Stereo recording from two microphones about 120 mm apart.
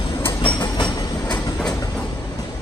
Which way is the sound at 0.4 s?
40° left (ahead or behind).